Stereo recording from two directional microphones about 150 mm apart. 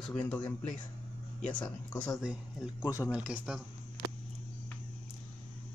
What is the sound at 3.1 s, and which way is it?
Speech, 5° right (ahead or behind).